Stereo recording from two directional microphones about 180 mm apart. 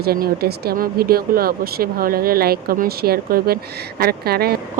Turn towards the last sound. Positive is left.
turn(degrees=-60)  # may be behind; listen again after turning